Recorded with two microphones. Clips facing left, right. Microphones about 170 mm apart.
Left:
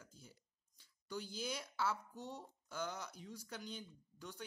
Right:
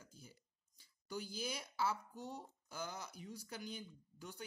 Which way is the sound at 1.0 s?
10° right (ahead or behind).